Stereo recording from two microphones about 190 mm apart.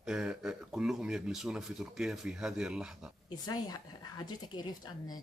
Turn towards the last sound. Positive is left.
turn(degrees=20)  # may be behind; listen again after turning